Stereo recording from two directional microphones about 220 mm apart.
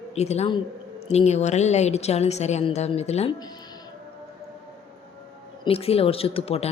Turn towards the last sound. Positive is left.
turn(degrees=25)  # may be behind; listen again after turning